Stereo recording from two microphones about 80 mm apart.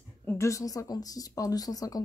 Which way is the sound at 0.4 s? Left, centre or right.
Left.